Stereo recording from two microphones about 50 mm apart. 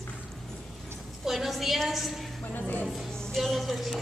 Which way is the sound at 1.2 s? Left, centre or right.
Centre.